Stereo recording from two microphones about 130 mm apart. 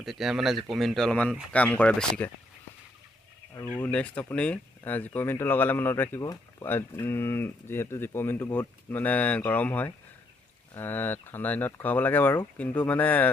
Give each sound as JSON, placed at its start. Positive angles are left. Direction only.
{"t": 0.0, "sound": "speech", "side_deg": 0}
{"t": 3.7, "sound": "speech", "side_deg": 10}